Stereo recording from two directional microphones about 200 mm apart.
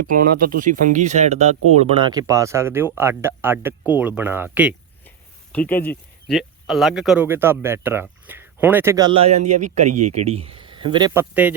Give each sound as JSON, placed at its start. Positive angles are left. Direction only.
{"t": 0.1, "sound": "speech", "side_deg": -45}
{"t": 5.0, "sound": "speech", "side_deg": 10}
{"t": 8.3, "sound": "a sound", "side_deg": -10}
{"t": 8.6, "sound": "speech", "side_deg": -10}
{"t": 11.1, "sound": "speech", "side_deg": -10}